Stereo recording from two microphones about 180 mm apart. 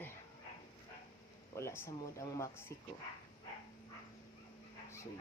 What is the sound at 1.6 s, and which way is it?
Speech, 15° left (ahead or behind).